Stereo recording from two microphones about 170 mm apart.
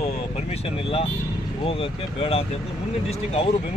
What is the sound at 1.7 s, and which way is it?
Speech, 35° left (ahead or behind).